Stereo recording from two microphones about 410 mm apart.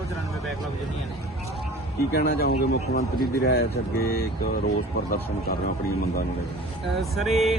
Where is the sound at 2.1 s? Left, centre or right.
Left.